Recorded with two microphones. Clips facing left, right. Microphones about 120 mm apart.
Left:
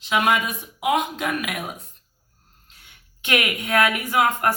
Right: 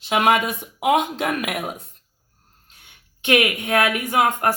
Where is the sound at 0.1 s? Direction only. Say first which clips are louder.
Right 3 dB; 55° right (ahead or behind).